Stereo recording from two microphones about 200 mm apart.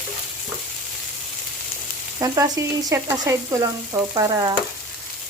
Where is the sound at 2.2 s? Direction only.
15° right (ahead or behind).